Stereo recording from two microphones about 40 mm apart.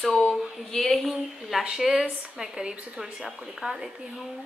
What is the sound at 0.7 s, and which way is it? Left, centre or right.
Speech, centre.